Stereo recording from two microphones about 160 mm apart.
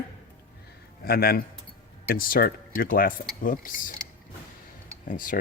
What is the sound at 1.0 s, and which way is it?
A man's voice, 70° left (ahead or behind).